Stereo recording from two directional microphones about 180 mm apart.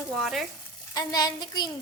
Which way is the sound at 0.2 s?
Centre (ahead or behind).